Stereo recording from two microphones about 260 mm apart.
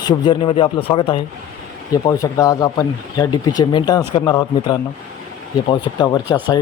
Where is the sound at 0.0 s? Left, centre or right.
Centre.